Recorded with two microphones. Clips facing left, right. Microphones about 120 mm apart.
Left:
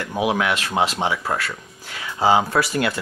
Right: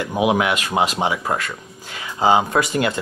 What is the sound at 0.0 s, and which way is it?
Speech, 15° right (ahead or behind).